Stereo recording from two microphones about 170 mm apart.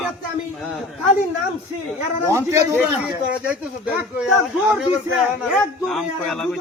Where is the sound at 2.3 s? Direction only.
15° right (ahead or behind).